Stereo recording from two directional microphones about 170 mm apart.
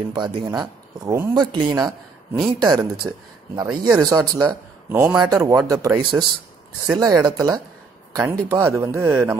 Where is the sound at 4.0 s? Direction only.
25° right (ahead or behind).